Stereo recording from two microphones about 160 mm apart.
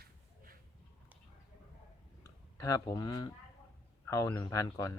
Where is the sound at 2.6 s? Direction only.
20° left (ahead or behind).